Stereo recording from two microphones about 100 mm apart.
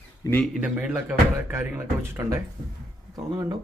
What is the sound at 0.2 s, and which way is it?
Speech, 35° left (ahead or behind).